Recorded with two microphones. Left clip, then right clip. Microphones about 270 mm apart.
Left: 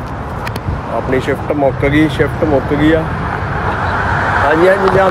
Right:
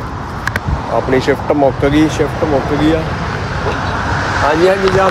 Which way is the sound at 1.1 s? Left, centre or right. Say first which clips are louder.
Right 2 dB; right.